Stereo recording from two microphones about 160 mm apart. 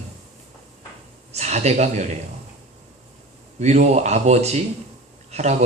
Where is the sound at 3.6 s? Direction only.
45° right (ahead or behind).